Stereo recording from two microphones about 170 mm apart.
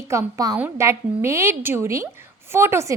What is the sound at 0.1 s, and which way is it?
A woman's voice, 20° right (ahead or behind).